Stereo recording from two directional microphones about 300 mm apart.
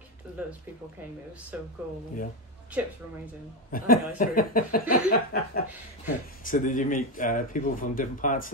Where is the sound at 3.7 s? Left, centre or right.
Left.